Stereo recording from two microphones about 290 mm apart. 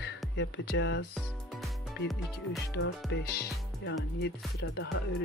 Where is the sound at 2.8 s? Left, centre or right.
Left.